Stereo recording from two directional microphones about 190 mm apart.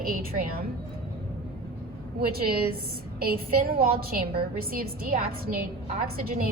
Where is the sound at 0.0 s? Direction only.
50° right (ahead or behind).